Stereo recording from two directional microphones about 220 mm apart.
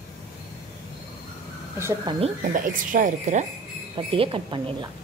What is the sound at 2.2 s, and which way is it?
Speech, 35° right (ahead or behind).